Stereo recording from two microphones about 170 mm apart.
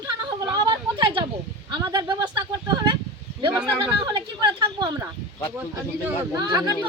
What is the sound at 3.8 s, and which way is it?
Speech, 25° right (ahead or behind).